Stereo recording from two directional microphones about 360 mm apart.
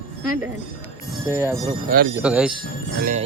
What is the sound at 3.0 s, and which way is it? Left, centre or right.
Speech, right.